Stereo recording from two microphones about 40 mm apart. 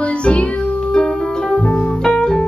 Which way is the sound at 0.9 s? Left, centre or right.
Left.